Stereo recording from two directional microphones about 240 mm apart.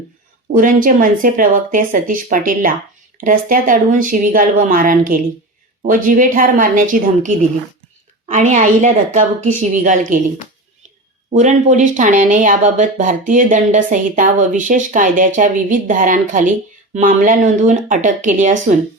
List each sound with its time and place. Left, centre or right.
0.5 s speech: right
11.3 s speech: right